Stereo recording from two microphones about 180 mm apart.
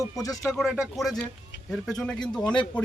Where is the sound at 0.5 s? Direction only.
5° right (ahead or behind).